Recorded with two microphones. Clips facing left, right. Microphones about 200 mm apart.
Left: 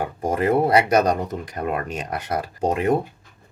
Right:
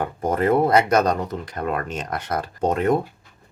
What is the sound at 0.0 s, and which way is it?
Speech, 10° left (ahead or behind).